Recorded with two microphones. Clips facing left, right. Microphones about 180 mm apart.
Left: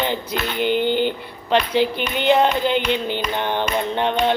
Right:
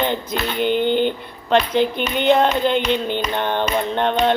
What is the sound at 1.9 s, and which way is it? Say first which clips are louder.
Speech: right 2 dB; 50° right (ahead or behind).